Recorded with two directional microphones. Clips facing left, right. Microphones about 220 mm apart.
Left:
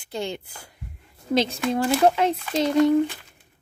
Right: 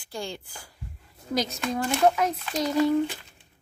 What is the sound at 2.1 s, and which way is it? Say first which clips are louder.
Speech: left 4 dB; 30° left (ahead or behind).